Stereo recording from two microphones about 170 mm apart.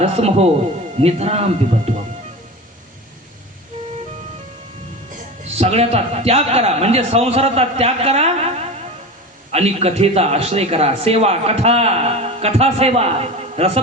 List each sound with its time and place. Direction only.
0.0 s a man's voice: 40° right (ahead or behind)
5.5 s a man's voice: 40° right (ahead or behind)